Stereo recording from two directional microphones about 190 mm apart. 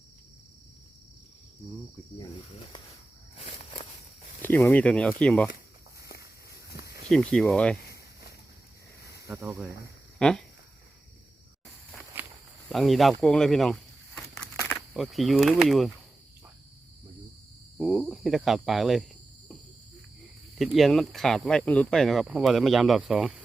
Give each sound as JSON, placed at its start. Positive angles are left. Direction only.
{"t": 3.3, "sound": "walk", "side_deg": 30}
{"t": 4.4, "sound": "speech", "side_deg": 10}
{"t": 6.0, "sound": "walk", "side_deg": 55}
{"t": 7.1, "sound": "speech", "side_deg": 5}
{"t": 9.2, "sound": "speech", "side_deg": -10}
{"t": 10.2, "sound": "speech", "side_deg": 5}
{"t": 12.1, "sound": "walk", "side_deg": -10}
{"t": 12.6, "sound": "speech", "side_deg": 0}
{"t": 14.9, "sound": "speech", "side_deg": 0}
{"t": 17.7, "sound": "speech", "side_deg": 0}
{"t": 20.6, "sound": "speech", "side_deg": 0}